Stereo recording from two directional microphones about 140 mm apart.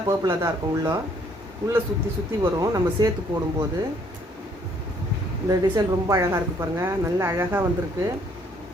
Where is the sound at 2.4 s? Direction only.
25° right (ahead or behind).